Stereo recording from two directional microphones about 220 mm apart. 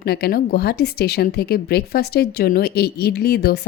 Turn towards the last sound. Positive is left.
turn(degrees=45)  # may be behind; listen again after turning